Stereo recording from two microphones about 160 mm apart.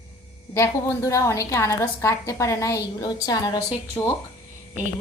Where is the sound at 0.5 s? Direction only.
20° left (ahead or behind).